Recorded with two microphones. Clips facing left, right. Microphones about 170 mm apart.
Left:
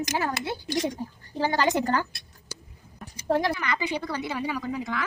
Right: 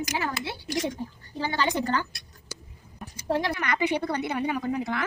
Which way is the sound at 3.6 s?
60° right (ahead or behind).